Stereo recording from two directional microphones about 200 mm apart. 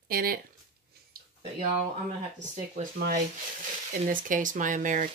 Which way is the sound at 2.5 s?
40° right (ahead or behind).